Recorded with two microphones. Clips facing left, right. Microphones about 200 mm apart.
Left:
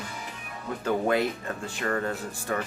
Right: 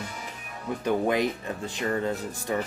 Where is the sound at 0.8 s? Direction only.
15° right (ahead or behind).